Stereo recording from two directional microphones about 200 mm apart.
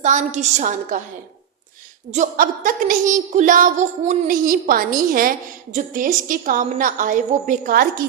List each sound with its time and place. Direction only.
0.0 s a woman's voice: 35° right (ahead or behind)
2.1 s a woman's voice: 40° right (ahead or behind)